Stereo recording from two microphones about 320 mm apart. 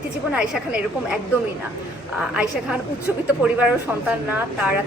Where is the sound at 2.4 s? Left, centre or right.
Centre.